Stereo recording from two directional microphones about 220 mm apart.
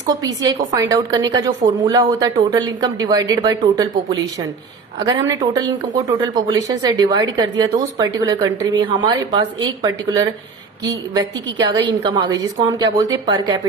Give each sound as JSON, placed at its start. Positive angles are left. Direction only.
{"t": 0.1, "sound": "a woman's voice", "side_deg": -15}
{"t": 4.9, "sound": "a woman's voice", "side_deg": -20}